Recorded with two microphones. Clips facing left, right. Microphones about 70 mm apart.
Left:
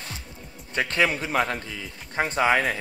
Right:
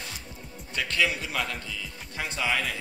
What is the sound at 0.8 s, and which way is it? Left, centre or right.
A man's voice, left.